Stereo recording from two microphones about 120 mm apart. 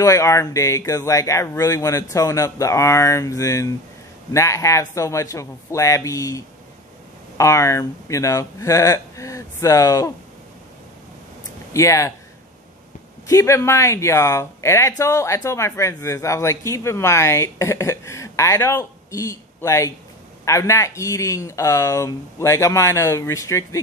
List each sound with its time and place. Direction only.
0.0 s speech: 25° left (ahead or behind)
11.7 s speech: 25° left (ahead or behind)
13.3 s speech: 25° left (ahead or behind)